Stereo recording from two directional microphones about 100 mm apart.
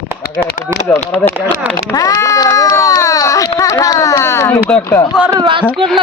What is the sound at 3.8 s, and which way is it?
Speech, 35° left (ahead or behind).